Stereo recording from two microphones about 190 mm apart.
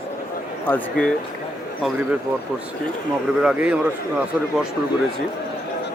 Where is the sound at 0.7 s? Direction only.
5° left (ahead or behind).